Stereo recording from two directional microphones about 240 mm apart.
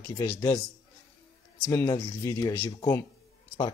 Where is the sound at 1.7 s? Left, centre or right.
Centre.